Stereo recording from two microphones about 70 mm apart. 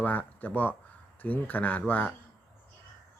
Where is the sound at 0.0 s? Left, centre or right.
Left.